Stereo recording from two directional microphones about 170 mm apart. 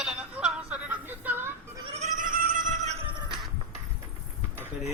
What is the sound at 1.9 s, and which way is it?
Goat, 40° right (ahead or behind).